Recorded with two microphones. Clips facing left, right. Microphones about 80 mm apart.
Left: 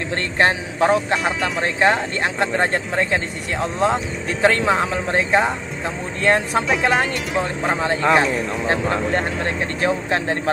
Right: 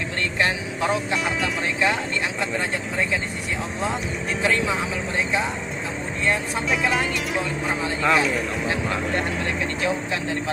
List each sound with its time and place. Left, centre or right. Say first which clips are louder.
0.4 s speech: left 7 dB; left
7.6 s speech: left 5 dB; left